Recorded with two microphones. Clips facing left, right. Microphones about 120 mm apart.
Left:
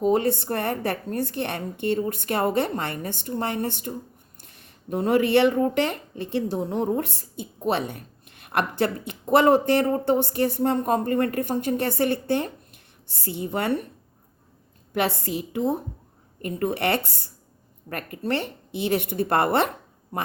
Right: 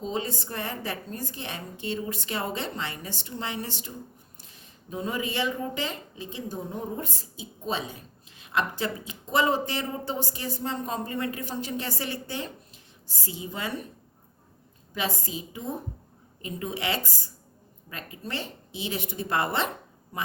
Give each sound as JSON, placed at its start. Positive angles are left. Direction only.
{"t": 0.0, "sound": "speech", "side_deg": 60}
{"t": 14.9, "sound": "speech", "side_deg": 65}